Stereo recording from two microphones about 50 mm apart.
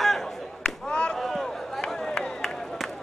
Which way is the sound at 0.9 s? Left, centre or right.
Left.